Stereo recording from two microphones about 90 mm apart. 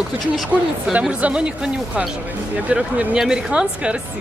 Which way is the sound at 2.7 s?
10° right (ahead or behind).